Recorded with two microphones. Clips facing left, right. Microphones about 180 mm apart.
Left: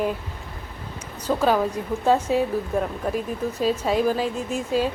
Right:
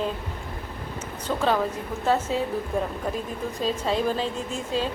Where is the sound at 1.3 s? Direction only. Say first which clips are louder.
Left 3 dB; 5° left (ahead or behind).